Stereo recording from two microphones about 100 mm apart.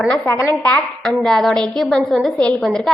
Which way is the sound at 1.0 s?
Centre (ahead or behind).